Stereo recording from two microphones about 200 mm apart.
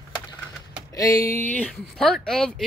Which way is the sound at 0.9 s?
15° left (ahead or behind).